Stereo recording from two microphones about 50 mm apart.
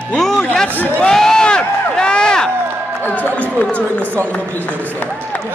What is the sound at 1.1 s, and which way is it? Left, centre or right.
Crowd, centre.